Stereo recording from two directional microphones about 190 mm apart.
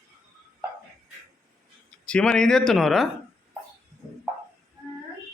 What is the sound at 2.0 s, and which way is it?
Speech, 5° left (ahead or behind).